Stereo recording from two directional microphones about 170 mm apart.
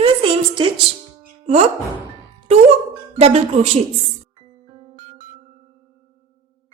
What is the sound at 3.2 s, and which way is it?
Speech, 40° right (ahead or behind).